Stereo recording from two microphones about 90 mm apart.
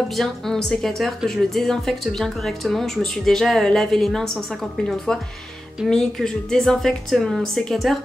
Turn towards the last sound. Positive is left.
turn(degrees=0)  # may be behind; listen again after turning